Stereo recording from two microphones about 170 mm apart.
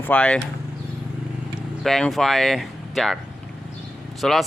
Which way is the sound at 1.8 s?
Centre (ahead or behind).